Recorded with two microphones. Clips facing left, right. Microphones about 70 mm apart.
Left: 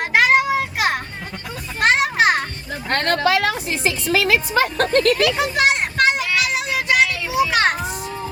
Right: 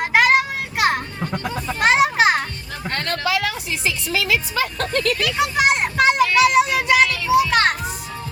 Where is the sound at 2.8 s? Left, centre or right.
Left.